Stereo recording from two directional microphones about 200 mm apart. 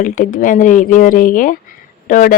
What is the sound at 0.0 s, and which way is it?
Speech, 45° left (ahead or behind).